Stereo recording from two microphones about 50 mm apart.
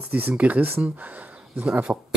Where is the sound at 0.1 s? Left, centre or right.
Right.